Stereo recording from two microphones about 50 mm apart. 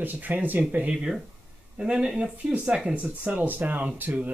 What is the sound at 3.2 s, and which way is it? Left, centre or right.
Speech, right.